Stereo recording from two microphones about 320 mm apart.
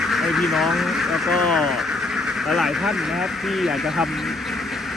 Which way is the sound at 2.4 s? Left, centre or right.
Centre.